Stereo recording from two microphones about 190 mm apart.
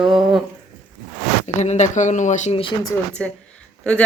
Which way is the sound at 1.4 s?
40° left (ahead or behind).